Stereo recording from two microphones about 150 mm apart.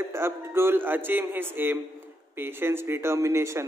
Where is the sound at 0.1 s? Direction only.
15° right (ahead or behind).